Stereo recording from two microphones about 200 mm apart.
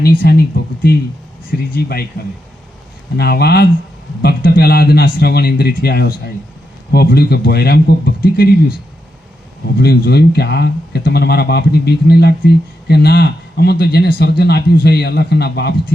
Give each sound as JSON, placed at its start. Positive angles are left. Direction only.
{"t": 0.0, "sound": "speech", "side_deg": 50}
{"t": 3.2, "sound": "speech", "side_deg": 55}
{"t": 9.7, "sound": "speech", "side_deg": 50}